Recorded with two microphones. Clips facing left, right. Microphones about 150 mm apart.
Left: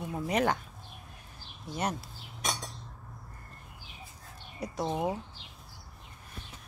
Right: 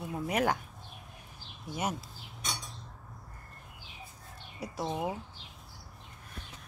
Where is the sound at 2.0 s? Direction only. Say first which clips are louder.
Left 1 dB; 75° left (ahead or behind).